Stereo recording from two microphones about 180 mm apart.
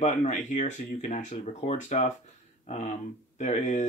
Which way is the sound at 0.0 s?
40° left (ahead or behind).